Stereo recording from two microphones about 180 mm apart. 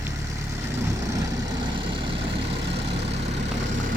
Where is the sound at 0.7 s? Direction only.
15° right (ahead or behind).